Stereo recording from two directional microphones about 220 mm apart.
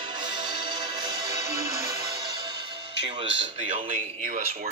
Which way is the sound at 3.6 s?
30° right (ahead or behind).